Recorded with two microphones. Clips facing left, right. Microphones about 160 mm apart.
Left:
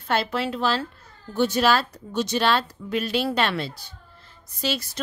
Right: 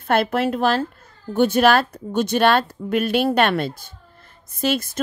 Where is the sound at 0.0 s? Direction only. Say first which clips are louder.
Right 6 dB; 55° right (ahead or behind).